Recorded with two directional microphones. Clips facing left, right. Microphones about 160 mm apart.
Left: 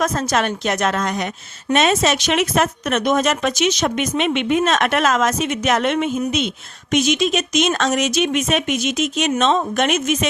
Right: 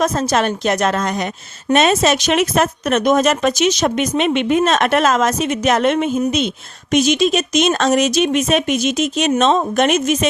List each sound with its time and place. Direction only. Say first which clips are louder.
0.0 s a woman's voice: right 3 dB; 30° right (ahead or behind)